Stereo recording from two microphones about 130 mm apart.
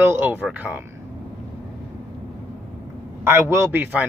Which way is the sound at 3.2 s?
20° right (ahead or behind).